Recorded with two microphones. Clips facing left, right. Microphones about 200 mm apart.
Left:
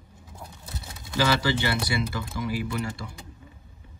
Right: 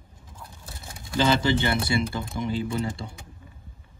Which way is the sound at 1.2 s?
25° right (ahead or behind).